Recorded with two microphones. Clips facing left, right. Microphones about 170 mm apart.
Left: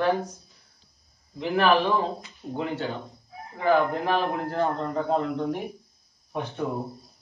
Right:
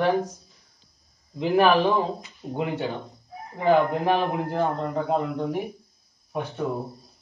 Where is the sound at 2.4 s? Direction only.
25° right (ahead or behind).